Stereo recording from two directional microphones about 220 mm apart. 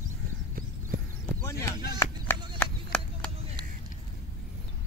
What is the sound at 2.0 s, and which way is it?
Music, 15° left (ahead or behind).